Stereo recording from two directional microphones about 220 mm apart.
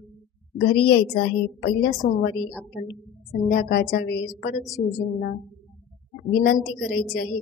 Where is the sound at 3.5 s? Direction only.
45° left (ahead or behind).